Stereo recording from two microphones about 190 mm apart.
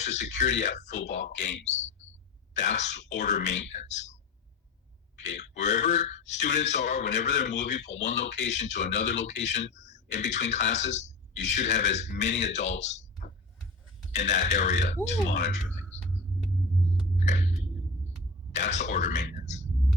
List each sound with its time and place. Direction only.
0.0 s speech: 35° left (ahead or behind)
5.5 s speech: 40° left (ahead or behind)
14.2 s speech: 40° left (ahead or behind)
18.5 s speech: 40° left (ahead or behind)